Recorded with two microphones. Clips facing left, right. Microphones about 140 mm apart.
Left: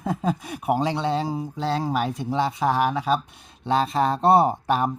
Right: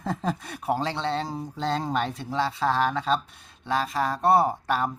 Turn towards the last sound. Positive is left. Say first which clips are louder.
# left 3 dB
turn(degrees=20)  # may be behind; listen again after turning